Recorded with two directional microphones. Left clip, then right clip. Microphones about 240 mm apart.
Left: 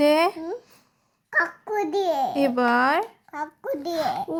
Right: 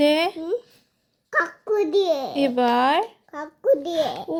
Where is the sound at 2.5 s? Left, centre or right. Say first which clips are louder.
Right 3 dB; left.